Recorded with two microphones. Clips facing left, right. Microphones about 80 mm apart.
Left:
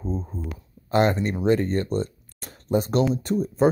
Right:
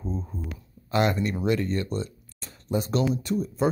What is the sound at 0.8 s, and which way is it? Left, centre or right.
Speech, left.